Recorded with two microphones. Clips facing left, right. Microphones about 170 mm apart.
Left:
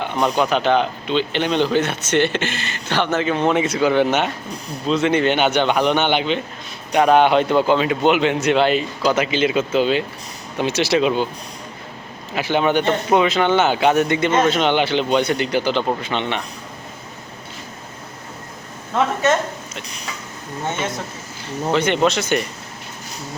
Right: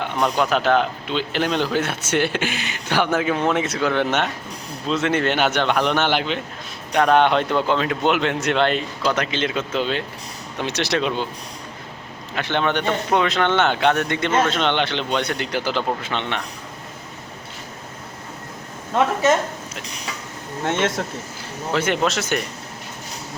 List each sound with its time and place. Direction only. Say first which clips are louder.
0.0 s speech: left 2 dB; centre (ahead or behind)
12.3 s speech: left 4 dB; 5° left (ahead or behind)
19.2 s a woman's voice: even; 10° right (ahead or behind)
20.7 s speech: right 3 dB; 90° right
21.7 s speech: left 3 dB; 5° right (ahead or behind)